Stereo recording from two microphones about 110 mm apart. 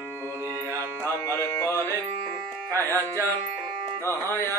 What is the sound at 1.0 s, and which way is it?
Music, 25° left (ahead or behind).